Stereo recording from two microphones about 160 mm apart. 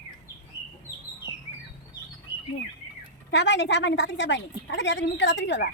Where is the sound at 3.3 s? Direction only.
90° left.